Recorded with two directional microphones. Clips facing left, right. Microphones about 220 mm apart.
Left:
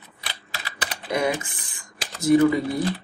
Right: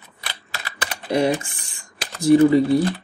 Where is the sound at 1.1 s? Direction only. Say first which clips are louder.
Right 5 dB; 30° right (ahead or behind).